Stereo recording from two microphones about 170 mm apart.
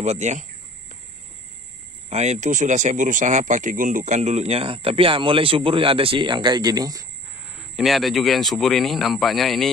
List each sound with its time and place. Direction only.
0.0 s speech: 40° right (ahead or behind)
2.0 s speech: 40° right (ahead or behind); by 7.1 s 20° right (ahead or behind)
7.7 s speech: centre (ahead or behind)